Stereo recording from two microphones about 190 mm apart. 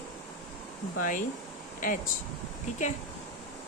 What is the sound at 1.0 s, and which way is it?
Speech, 45° left (ahead or behind).